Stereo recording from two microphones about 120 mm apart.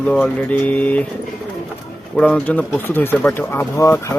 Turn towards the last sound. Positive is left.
turn(degrees=25)  # may be behind; listen again after turning